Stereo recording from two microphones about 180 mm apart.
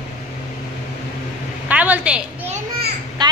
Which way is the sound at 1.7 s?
10° right (ahead or behind).